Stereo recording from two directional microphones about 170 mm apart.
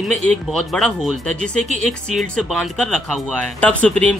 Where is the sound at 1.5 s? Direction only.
45° right (ahead or behind).